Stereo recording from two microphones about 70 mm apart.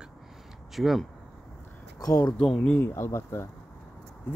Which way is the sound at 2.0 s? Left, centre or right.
Left.